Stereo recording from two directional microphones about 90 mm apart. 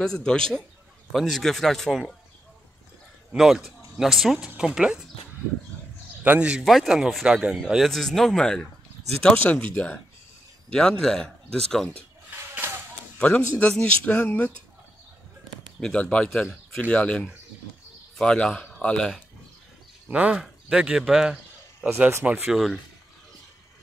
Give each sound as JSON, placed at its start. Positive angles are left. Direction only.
{"t": 0.0, "sound": "speech", "side_deg": 10}
{"t": 3.3, "sound": "speech", "side_deg": -5}
{"t": 6.2, "sound": "speech", "side_deg": -15}
{"t": 6.6, "sound": "speech", "side_deg": 0}
{"t": 10.7, "sound": "speech", "side_deg": 5}
{"t": 12.3, "sound": "a sound", "side_deg": -25}
{"t": 13.6, "sound": "speech", "side_deg": 10}
{"t": 15.8, "sound": "a man's voice", "side_deg": 10}
{"t": 20.1, "sound": "speech", "side_deg": -15}
{"t": 21.8, "sound": "speech", "side_deg": -20}
{"t": 22.5, "sound": "speech", "side_deg": 0}